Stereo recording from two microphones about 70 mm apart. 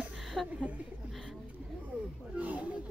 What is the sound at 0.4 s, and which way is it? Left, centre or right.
Speech, centre.